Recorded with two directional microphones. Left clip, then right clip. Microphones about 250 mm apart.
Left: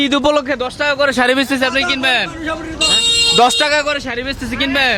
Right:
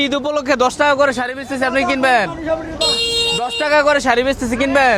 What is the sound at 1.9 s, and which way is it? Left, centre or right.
Speech, right.